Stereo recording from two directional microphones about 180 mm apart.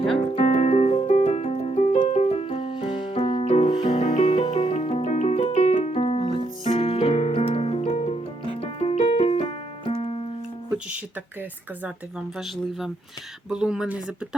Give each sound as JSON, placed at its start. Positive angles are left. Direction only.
{"t": 0.3, "sound": "music", "side_deg": 40}
{"t": 13.5, "sound": "speech", "side_deg": -5}